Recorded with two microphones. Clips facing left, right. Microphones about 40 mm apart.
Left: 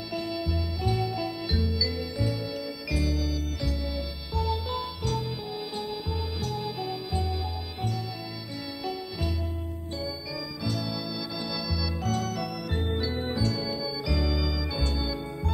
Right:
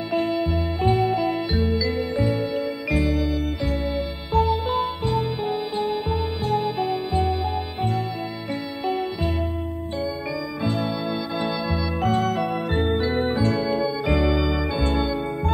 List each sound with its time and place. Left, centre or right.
0.1 s music: right
8.8 s music: right
10.6 s keyboard: right
11.4 s organ: right